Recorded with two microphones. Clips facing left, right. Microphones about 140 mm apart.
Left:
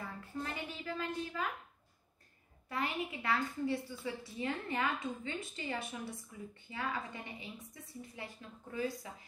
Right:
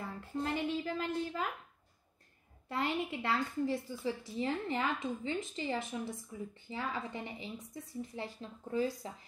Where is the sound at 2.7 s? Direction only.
25° right (ahead or behind).